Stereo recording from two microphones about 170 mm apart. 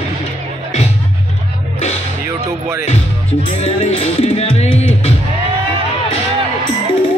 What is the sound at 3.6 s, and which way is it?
Music, 40° left (ahead or behind).